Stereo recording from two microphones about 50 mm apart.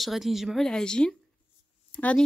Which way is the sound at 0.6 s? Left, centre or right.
Centre.